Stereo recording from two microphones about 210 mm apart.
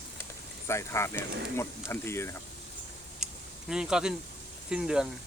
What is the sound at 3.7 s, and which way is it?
Speech, 5° right (ahead or behind).